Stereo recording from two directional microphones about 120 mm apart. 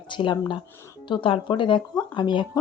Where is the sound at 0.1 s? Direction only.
40° left (ahead or behind).